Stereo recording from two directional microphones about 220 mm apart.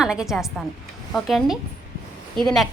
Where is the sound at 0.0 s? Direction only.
5° right (ahead or behind).